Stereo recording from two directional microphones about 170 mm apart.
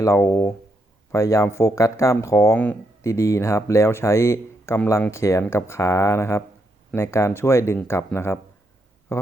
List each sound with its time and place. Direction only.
0.0 s speech: 15° left (ahead or behind)